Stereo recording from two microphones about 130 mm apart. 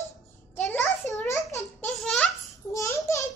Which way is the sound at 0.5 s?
15° left (ahead or behind).